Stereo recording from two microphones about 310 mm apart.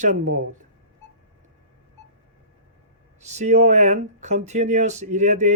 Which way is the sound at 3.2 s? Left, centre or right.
Right.